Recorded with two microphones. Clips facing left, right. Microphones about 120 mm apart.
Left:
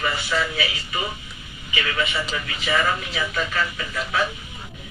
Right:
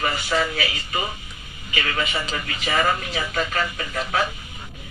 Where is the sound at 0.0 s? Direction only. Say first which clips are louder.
Right 1 dB; 45° right (ahead or behind).